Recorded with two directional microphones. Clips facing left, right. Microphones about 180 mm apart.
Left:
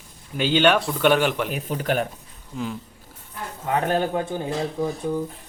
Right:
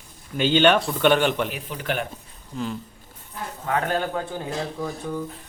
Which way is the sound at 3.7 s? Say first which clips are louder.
Left 2 dB; 20° left (ahead or behind).